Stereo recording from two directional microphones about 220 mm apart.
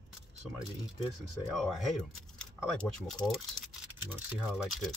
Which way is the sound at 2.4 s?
5° left (ahead or behind).